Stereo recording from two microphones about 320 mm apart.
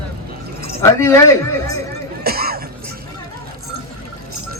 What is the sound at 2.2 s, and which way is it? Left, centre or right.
Music, right.